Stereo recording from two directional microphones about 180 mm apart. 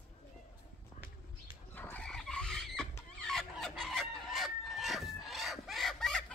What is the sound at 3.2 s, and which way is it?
Chicken, centre (ahead or behind).